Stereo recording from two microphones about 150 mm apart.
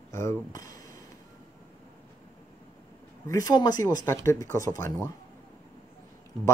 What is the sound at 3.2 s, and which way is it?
Speech, 25° left (ahead or behind).